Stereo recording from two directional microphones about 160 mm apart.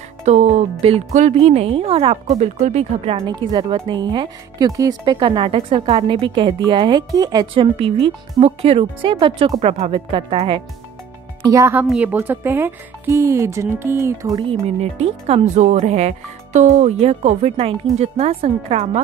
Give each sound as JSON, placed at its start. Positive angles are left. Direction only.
{"t": 0.2, "sound": "speech", "side_deg": -45}
{"t": 3.3, "sound": "speech", "side_deg": -25}
{"t": 11.4, "sound": "speech", "side_deg": -20}
{"t": 11.8, "sound": "speech", "side_deg": -5}
{"t": 14.8, "sound": "speech", "side_deg": -40}